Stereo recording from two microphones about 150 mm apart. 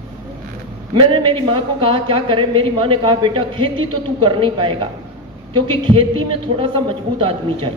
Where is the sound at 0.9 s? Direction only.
35° right (ahead or behind).